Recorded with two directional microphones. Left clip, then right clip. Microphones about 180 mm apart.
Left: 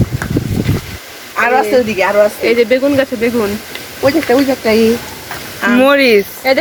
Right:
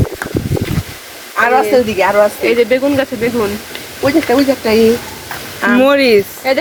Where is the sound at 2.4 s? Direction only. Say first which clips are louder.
Left 1 dB; 30° left (ahead or behind).